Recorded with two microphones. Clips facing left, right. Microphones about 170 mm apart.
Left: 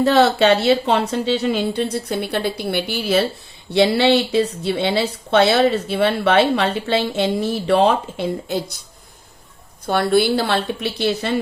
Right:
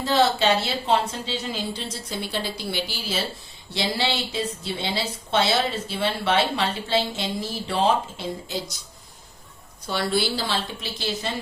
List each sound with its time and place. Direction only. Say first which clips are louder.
0.0 s speech: left 7 dB; 65° left (ahead or behind)
9.8 s speech: left 8 dB; 55° left (ahead or behind)